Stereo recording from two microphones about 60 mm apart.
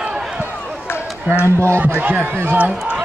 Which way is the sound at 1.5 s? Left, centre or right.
Right.